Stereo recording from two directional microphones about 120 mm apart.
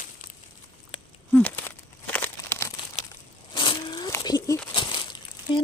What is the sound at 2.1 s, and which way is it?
Crumpling, 15° left (ahead or behind).